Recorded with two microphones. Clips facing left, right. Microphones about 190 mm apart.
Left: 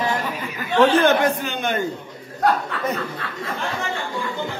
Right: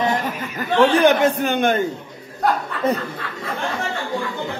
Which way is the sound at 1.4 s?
55° right (ahead or behind).